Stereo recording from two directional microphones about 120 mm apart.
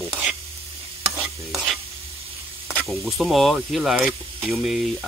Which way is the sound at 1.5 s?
Centre (ahead or behind).